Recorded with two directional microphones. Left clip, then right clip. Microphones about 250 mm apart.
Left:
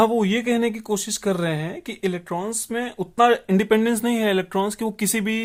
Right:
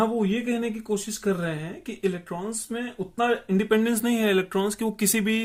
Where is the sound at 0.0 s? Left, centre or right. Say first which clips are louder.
Left 6 dB; left.